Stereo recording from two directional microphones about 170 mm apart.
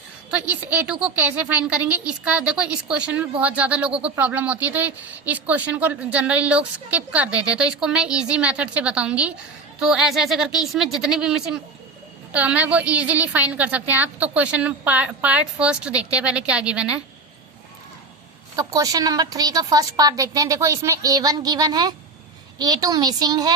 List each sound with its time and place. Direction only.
0.3 s speech: 10° right (ahead or behind)
18.5 s a woman's voice: 20° right (ahead or behind)